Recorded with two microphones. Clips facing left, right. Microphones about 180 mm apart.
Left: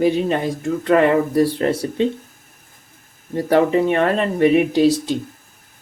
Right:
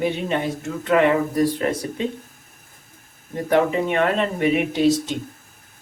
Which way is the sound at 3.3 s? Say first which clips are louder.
Left 4 dB; 35° left (ahead or behind).